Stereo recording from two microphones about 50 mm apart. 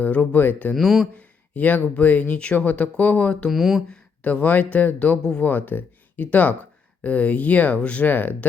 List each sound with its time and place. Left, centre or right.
0.0 s speech: left
0.8 s speech: centre
1.1 s speech: left
3.5 s speech: centre
3.8 s speech: left
8.0 s speech: left